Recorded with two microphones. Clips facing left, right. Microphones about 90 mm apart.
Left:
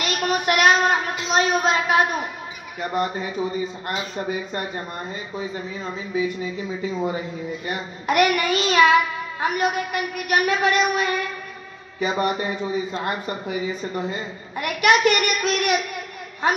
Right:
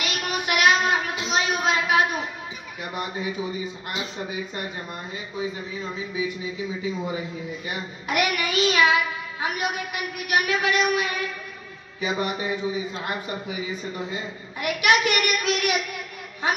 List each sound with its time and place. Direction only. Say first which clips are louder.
0.0 s child singing: left 5 dB; 45° left (ahead or behind)
2.8 s speech: left 6 dB; 40° left (ahead or behind)
3.8 s child singing: left 4 dB; 40° left (ahead or behind)
6.4 s child singing: left 2 dB; 40° left (ahead or behind)
14.6 s child singing: left 3 dB; 45° left (ahead or behind)